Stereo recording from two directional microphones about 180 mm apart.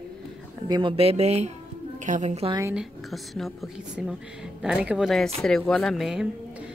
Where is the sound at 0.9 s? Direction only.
35° right (ahead or behind).